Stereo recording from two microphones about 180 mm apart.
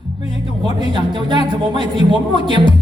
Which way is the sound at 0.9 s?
25° right (ahead or behind).